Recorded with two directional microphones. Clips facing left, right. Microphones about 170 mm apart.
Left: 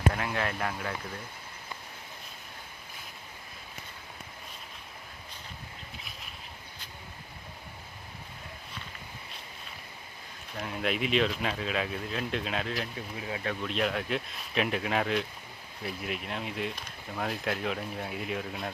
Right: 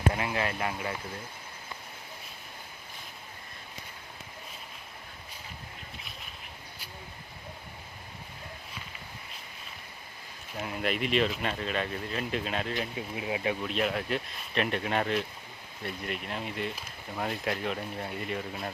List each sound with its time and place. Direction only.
0.1 s speech: 5° right (ahead or behind)
10.5 s speech: 5° right (ahead or behind)
13.1 s speech: 15° right (ahead or behind)
13.7 s speech: centre (ahead or behind)